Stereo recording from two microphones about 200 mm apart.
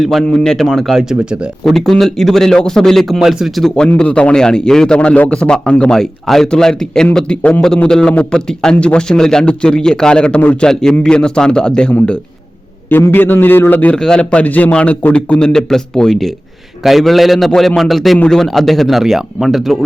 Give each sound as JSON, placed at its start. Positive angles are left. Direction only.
{"t": 0.0, "sound": "a man's voice", "side_deg": 0}